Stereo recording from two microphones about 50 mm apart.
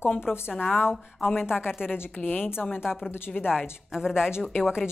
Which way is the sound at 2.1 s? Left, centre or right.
Left.